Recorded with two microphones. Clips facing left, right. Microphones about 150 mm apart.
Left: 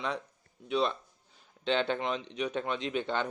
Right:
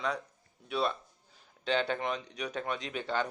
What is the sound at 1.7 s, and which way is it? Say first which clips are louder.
Speech: left 1 dB; 20° left (ahead or behind).